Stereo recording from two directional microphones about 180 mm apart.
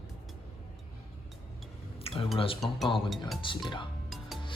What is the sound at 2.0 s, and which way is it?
Dishes, 30° left (ahead or behind).